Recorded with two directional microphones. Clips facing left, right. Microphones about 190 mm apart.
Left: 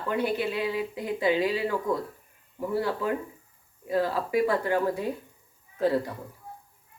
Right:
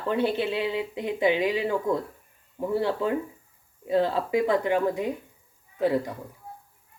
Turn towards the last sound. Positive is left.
turn(degrees=-15)  # may be behind; listen again after turning